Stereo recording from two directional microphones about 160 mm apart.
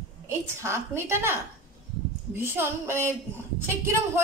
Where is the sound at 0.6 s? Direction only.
15° right (ahead or behind).